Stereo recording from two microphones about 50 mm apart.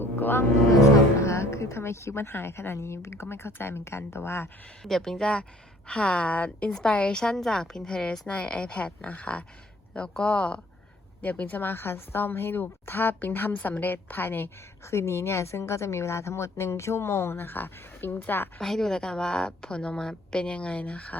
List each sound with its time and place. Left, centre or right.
0.0 s music: left
1.2 s a woman's voice: left
4.8 s a woman's voice: centre
7.2 s a woman's voice: centre
8.4 s a woman's voice: left
11.6 s speech: left
13.5 s a woman's voice: left
14.8 s speech: left
18.6 s a woman's voice: centre; by 21.2 s left